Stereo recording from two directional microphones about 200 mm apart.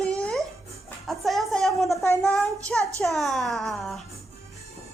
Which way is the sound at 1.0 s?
Centre (ahead or behind).